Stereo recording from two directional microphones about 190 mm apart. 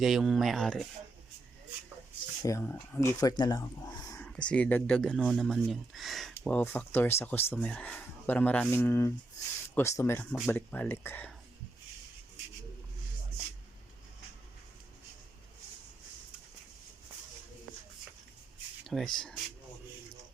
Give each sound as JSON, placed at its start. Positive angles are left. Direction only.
{"t": 0.0, "sound": "speech", "side_deg": 0}
{"t": 2.4, "sound": "speech", "side_deg": 15}
{"t": 4.3, "sound": "speech", "side_deg": 5}
{"t": 18.9, "sound": "speech", "side_deg": 0}